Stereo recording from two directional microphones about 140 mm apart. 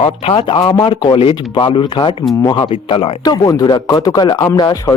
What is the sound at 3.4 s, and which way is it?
Speech, 25° left (ahead or behind).